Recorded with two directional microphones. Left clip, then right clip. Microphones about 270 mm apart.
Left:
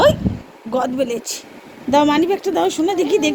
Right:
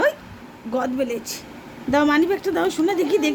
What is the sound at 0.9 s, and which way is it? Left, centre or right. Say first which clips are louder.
Speech: left 4 dB; centre.